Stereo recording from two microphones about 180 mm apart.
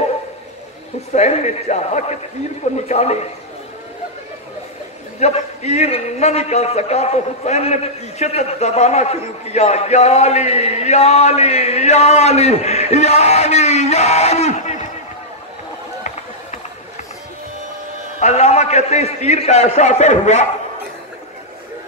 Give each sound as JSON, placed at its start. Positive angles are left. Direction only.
{"t": 1.1, "sound": "a man's voice", "side_deg": 40}
{"t": 5.2, "sound": "a man's voice", "side_deg": 35}
{"t": 18.2, "sound": "a man's voice", "side_deg": 35}